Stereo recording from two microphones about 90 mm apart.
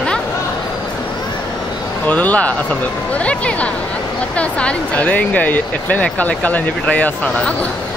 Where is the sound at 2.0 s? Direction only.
15° left (ahead or behind).